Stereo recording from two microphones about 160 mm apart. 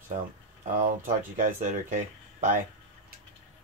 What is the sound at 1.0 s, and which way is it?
Speech, 55° right (ahead or behind).